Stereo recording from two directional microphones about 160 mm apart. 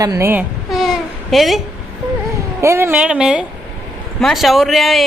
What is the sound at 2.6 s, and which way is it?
A woman's voice, 15° right (ahead or behind).